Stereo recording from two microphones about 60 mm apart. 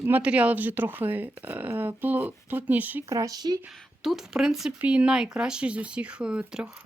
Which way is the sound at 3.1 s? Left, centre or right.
Right.